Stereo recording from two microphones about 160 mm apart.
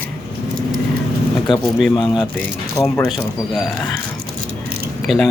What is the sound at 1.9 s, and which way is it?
Speech, 30° left (ahead or behind).